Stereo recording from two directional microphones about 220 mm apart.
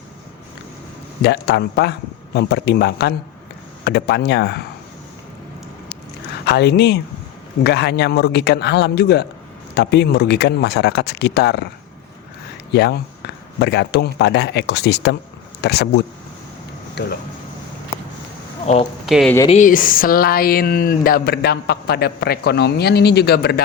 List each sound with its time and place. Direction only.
1.2 s speech: 50° left (ahead or behind)
6.4 s speech: 50° left (ahead or behind)
12.7 s speech: 50° left (ahead or behind)
18.6 s speech: 30° left (ahead or behind)
19.0 s speech: centre (ahead or behind)
19.5 s speech: 35° left (ahead or behind)